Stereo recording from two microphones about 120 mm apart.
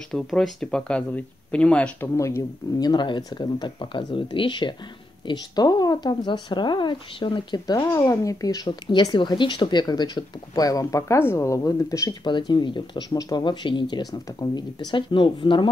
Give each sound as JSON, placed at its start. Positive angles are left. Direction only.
{"t": 0.1, "sound": "speech", "side_deg": 5}
{"t": 2.1, "sound": "speech", "side_deg": 25}
{"t": 12.3, "sound": "speech", "side_deg": 40}